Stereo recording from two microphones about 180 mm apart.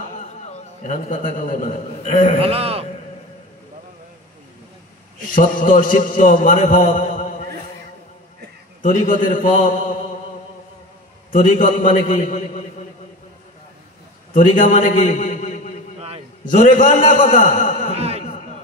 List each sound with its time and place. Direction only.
0.3 s a man's voice: 40° left (ahead or behind)
2.4 s a man's voice: 35° right (ahead or behind)
5.3 s a man's voice: 50° left (ahead or behind)
8.8 s a man's voice: 45° left (ahead or behind)
11.3 s a man's voice: 45° left (ahead or behind)
14.3 s a man's voice: 45° left (ahead or behind)
17.9 s a sound: 35° right (ahead or behind)